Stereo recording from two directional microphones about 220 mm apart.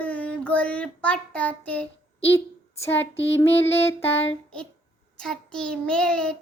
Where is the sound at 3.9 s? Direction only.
10° left (ahead or behind).